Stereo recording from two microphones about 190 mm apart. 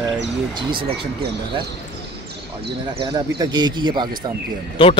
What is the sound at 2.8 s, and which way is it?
Speech, 25° right (ahead or behind).